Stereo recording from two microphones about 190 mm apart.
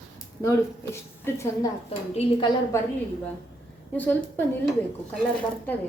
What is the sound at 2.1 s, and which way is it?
Speech, 30° left (ahead or behind).